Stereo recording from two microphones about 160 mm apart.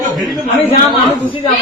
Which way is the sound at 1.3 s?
30° left (ahead or behind).